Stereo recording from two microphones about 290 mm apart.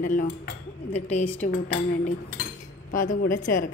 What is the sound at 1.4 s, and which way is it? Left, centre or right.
Speech, left.